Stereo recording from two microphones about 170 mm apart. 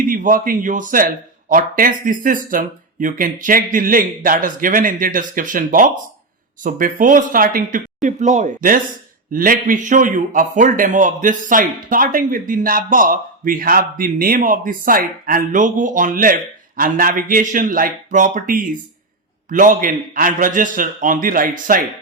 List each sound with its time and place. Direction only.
0.0 s a man's voice: 50° right (ahead or behind)